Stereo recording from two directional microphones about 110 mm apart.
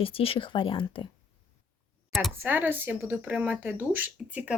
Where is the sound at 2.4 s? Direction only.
20° right (ahead or behind).